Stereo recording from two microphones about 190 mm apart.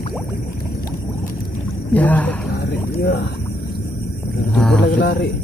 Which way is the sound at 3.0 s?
60° left (ahead or behind).